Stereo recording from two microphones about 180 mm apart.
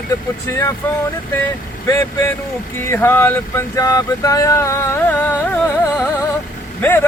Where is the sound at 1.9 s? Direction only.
15° left (ahead or behind).